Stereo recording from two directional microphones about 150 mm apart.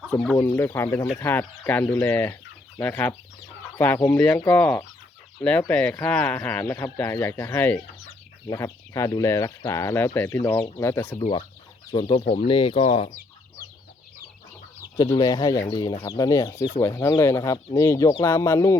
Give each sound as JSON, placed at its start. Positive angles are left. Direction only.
{"t": 0.1, "sound": "speech", "side_deg": 10}
{"t": 0.3, "sound": "speech", "side_deg": 20}
{"t": 11.2, "sound": "speech", "side_deg": 30}
{"t": 14.9, "sound": "speech", "side_deg": 30}